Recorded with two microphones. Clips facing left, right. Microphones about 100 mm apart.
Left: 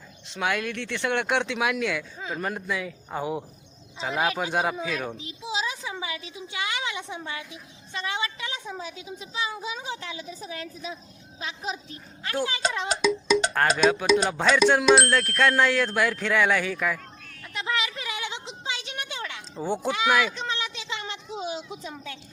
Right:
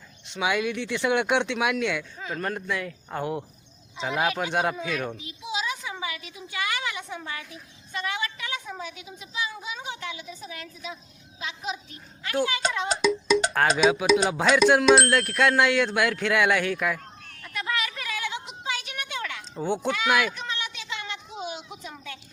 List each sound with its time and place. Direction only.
0.3 s speech: centre (ahead or behind)
2.1 s speech: 15° left (ahead or behind)
2.4 s speech: 5° left (ahead or behind)
5.1 s a woman's voice: 30° left (ahead or behind)
12.9 s speech: centre (ahead or behind)
17.4 s a sound: 25° left (ahead or behind)
19.6 s speech: 5° left (ahead or behind)
20.3 s a sound: 30° left (ahead or behind)